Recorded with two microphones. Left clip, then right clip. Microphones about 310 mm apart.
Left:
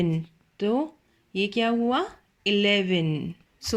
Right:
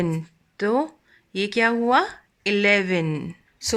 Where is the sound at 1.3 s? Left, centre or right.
Centre.